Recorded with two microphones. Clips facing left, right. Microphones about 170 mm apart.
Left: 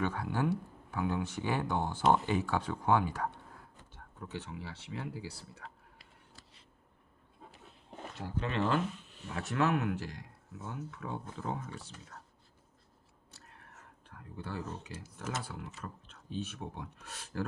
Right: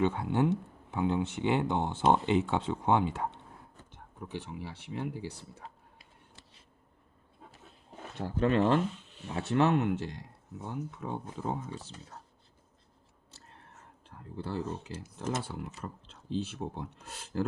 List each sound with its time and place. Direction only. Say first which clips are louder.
0.0 s speech: right 5 dB; 25° right (ahead or behind)
8.4 s speech: right 6 dB; 40° right (ahead or behind); by 11.9 s 20° right (ahead or behind)
13.3 s whispering: right 2 dB; 25° right (ahead or behind)
14.4 s speech: right 5 dB; 25° right (ahead or behind)